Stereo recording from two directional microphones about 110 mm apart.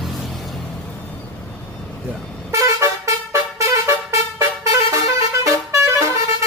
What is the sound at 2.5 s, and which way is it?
Vehicle, 30° right (ahead or behind).